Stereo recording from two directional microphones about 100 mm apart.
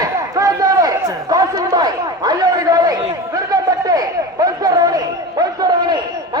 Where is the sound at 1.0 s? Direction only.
35° right (ahead or behind).